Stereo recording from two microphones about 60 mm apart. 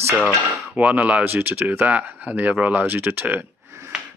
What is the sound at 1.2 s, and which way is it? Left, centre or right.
Speech, right.